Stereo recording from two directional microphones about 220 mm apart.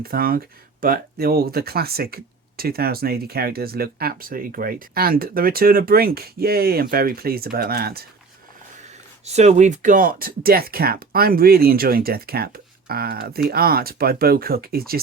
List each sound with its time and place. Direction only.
0.0 s speech: 40° right (ahead or behind)
9.2 s speech: 30° right (ahead or behind)